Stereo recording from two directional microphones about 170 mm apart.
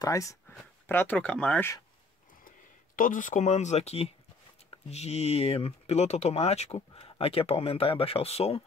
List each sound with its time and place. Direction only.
0.0 s speech: 20° left (ahead or behind)
3.0 s speech: 50° left (ahead or behind)